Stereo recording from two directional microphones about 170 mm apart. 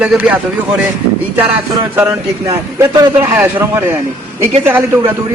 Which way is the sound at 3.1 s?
10° right (ahead or behind).